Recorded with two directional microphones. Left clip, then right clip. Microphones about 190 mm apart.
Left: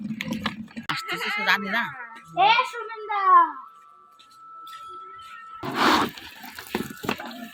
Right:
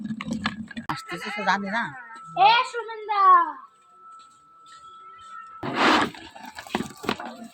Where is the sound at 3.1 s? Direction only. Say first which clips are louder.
Right 1 dB; 35° left (ahead or behind).